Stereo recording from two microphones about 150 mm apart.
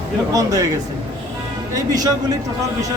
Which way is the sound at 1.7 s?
25° right (ahead or behind).